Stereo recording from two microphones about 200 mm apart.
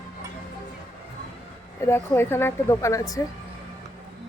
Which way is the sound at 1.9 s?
10° left (ahead or behind).